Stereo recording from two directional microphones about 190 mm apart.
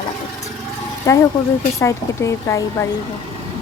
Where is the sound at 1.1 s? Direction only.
15° left (ahead or behind).